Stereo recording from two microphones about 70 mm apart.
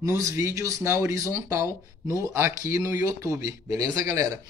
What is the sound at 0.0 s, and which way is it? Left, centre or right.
Speech, right.